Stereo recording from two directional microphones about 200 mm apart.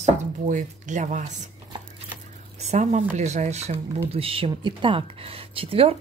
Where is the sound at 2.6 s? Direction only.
35° right (ahead or behind).